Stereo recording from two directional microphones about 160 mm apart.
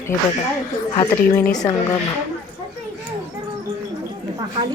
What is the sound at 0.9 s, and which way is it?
Speech, 25° left (ahead or behind).